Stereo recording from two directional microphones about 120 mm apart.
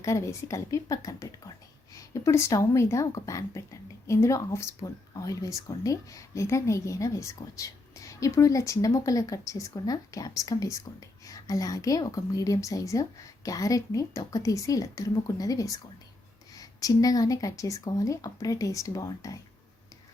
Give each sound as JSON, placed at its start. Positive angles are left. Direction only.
{"t": 0.0, "sound": "a woman's voice", "side_deg": 25}